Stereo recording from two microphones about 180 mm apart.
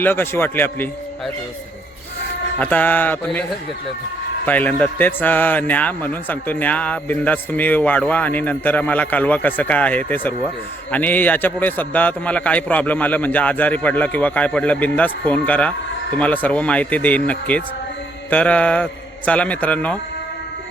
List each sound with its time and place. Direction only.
0.0 s a man's voice: 10° left (ahead or behind)
2.6 s a man's voice: 10° left (ahead or behind)
4.4 s a man's voice: 10° left (ahead or behind)